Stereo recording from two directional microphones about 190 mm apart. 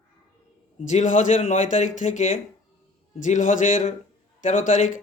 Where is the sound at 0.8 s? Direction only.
40° left (ahead or behind).